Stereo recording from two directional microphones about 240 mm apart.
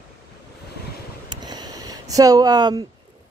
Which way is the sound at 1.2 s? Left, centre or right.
Centre.